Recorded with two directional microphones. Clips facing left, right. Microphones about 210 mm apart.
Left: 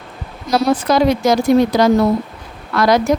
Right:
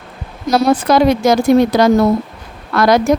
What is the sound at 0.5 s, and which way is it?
Speech, 55° right (ahead or behind).